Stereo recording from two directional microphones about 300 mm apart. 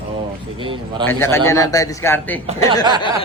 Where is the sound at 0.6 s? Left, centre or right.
Centre.